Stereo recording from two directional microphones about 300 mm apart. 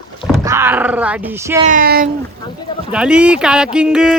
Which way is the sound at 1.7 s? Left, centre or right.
Right.